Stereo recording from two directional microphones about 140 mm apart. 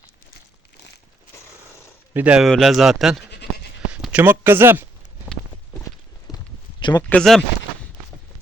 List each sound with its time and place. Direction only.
2.1 s speech: 10° right (ahead or behind)
6.3 s clip-clop: 30° left (ahead or behind)
7.1 s speech: 5° left (ahead or behind)